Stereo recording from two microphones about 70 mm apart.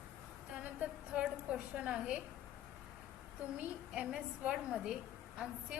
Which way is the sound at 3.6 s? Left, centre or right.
Centre.